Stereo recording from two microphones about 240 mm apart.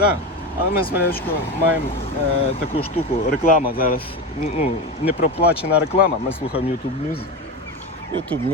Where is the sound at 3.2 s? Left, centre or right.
Left.